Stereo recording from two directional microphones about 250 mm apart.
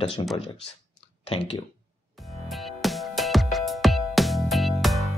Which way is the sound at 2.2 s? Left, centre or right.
Centre.